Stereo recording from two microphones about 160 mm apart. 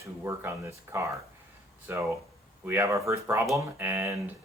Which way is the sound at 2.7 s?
15° right (ahead or behind).